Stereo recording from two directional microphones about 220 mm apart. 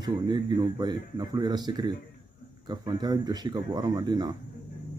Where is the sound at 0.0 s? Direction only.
20° right (ahead or behind).